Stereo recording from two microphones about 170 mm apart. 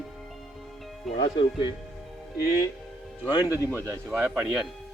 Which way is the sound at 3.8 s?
15° right (ahead or behind).